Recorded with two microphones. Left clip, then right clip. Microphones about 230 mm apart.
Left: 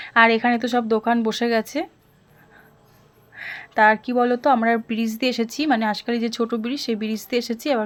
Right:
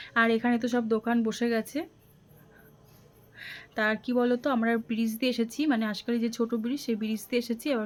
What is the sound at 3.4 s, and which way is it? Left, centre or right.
Speech, centre.